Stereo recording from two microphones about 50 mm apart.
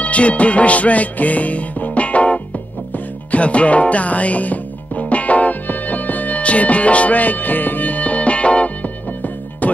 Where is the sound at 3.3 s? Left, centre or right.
Left.